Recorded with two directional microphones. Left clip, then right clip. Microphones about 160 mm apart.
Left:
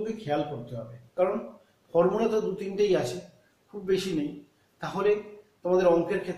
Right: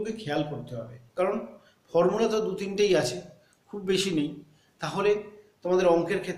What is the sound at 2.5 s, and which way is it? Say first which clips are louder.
Speech: right 1 dB; 10° right (ahead or behind).